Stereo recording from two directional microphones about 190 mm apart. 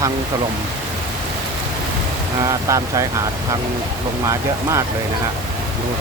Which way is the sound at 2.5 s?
15° right (ahead or behind).